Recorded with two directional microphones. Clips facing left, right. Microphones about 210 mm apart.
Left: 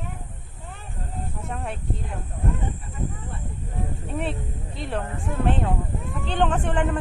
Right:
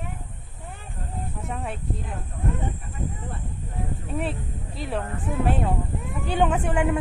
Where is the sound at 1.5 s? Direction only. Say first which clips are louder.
Even; centre (ahead or behind).